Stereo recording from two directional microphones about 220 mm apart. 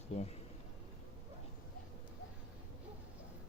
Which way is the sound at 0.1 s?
30° left (ahead or behind).